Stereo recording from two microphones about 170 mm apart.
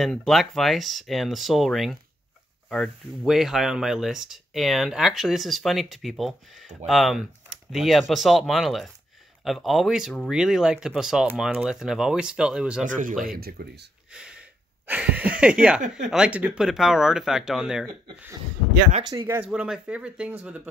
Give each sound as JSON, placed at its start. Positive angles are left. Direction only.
{"t": 0.0, "sound": "speech", "side_deg": 0}
{"t": 12.8, "sound": "speech", "side_deg": -50}
{"t": 13.2, "sound": "speech", "side_deg": -60}
{"t": 14.1, "sound": "a sound", "side_deg": -5}
{"t": 14.9, "sound": "speech", "side_deg": -10}
{"t": 19.0, "sound": "speech", "side_deg": -15}